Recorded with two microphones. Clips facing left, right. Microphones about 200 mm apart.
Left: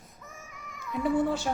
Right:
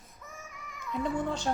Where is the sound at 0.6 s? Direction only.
5° left (ahead or behind).